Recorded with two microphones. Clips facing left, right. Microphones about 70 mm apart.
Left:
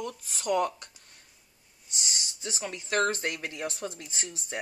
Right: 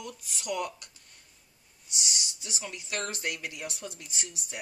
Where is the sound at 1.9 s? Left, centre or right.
Left.